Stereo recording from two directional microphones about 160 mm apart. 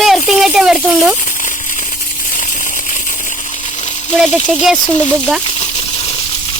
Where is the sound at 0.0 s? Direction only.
Centre (ahead or behind).